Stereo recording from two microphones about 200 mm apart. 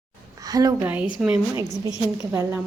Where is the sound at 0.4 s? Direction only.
20° right (ahead or behind).